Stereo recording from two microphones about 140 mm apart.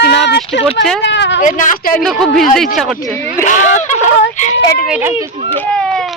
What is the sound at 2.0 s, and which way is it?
Speech, centre (ahead or behind).